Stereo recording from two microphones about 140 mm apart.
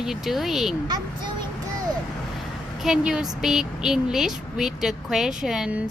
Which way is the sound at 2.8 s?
5° right (ahead or behind).